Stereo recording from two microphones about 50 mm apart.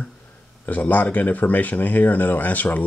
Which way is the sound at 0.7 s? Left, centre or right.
Left.